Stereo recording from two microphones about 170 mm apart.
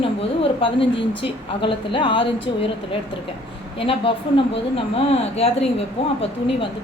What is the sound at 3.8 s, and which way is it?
Speech, 30° left (ahead or behind).